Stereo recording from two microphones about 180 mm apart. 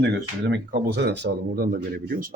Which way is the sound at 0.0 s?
70° right (ahead or behind).